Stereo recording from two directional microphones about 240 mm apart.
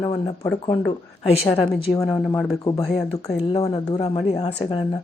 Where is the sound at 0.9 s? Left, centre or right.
Left.